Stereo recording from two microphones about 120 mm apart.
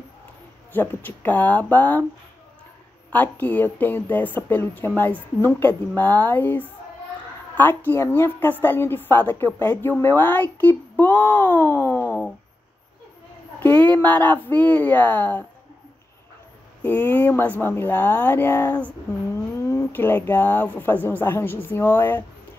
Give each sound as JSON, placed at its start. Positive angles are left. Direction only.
{"t": 0.7, "sound": "speech", "side_deg": 15}
{"t": 3.1, "sound": "speech", "side_deg": 15}
{"t": 13.6, "sound": "speech", "side_deg": 15}
{"t": 16.8, "sound": "speech", "side_deg": 15}
{"t": 19.3, "sound": "speech", "side_deg": 25}